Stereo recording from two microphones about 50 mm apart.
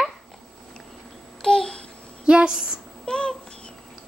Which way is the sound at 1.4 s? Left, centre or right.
Centre.